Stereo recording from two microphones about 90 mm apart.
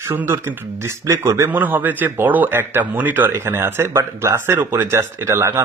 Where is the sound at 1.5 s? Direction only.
20° right (ahead or behind).